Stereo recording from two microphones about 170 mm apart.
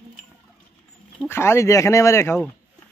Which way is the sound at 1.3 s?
15° left (ahead or behind).